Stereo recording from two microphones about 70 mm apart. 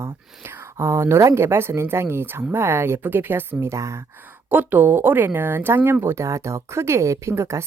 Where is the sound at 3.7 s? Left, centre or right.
Right.